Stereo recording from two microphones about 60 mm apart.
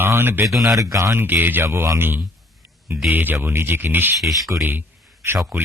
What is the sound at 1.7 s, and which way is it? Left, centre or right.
Speech, right.